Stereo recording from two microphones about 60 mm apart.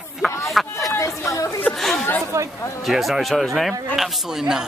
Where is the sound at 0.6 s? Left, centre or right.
Centre.